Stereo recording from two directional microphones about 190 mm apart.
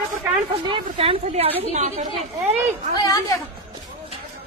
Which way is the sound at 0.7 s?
30° right (ahead or behind).